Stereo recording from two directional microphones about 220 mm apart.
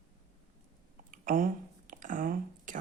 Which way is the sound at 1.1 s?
40° right (ahead or behind).